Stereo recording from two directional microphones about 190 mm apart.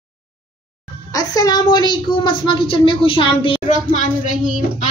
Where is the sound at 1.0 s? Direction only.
20° left (ahead or behind).